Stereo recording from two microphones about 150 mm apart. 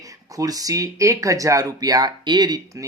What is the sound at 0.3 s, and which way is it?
Speech, 25° right (ahead or behind).